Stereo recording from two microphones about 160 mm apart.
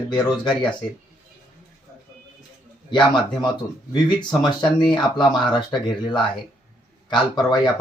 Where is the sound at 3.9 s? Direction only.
25° left (ahead or behind).